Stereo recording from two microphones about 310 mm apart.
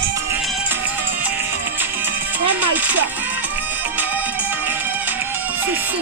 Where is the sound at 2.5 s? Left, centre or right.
Centre.